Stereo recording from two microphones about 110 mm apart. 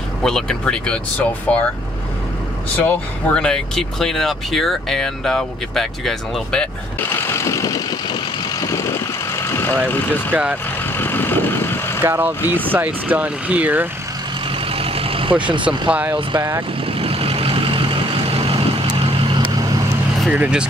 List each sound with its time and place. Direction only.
0.2 s speech: 5° left (ahead or behind)
2.8 s speech: 15° left (ahead or behind)
7.3 s vehicle: 30° left (ahead or behind)
10.3 s speech: 10° right (ahead or behind)
11.0 s vehicle: 20° left (ahead or behind)
12.0 s speech: 20° right (ahead or behind)
14.7 s vehicle: 60° right (ahead or behind)
15.9 s speech: 15° right (ahead or behind)
16.8 s vehicle: 60° right (ahead or behind)
20.2 s speech: 10° right (ahead or behind)